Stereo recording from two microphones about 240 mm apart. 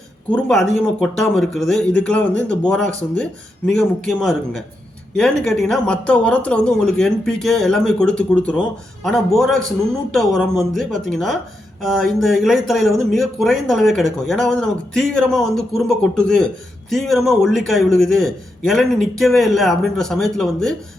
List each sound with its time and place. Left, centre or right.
0.3 s speech: centre